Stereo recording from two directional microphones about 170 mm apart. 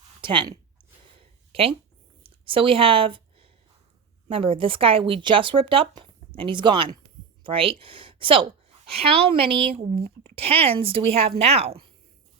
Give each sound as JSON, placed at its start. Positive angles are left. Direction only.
{"t": 0.2, "sound": "speech", "side_deg": -30}
{"t": 1.2, "sound": "a sound", "side_deg": -35}
{"t": 4.3, "sound": "speech", "side_deg": -35}